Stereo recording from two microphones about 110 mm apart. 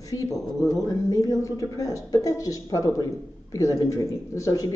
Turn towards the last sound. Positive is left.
turn(degrees=30)  # may be behind; listen again after turning